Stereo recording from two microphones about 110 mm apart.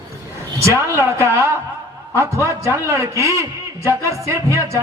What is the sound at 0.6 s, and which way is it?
Music, 25° right (ahead or behind).